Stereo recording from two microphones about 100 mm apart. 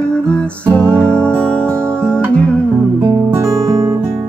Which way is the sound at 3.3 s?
40° right (ahead or behind).